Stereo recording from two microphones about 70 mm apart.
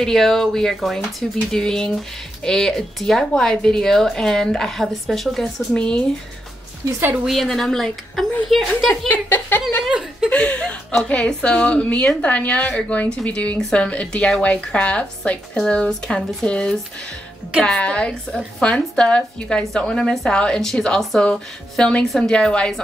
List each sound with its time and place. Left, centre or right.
0.0 s a woman's voice: centre
5.8 s a woman's voice: centre
7.2 s a woman's voice: centre
9.1 s a woman's voice: left
10.3 s a woman's voice: centre